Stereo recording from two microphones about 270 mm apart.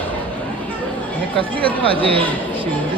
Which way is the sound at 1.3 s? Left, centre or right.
Centre.